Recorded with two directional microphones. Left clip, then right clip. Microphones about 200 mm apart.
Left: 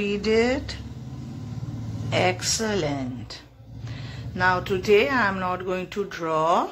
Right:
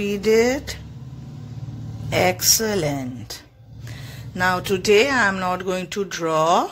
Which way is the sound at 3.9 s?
35° right (ahead or behind).